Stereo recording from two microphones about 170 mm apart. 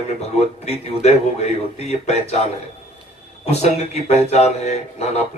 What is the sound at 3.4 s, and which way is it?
Speech, 40° left (ahead or behind).